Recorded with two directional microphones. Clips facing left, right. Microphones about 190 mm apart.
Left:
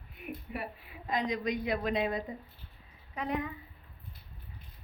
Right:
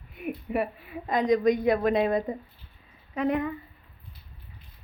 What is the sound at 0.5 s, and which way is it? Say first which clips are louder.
A woman's voice: right 11 dB; 60° right (ahead or behind).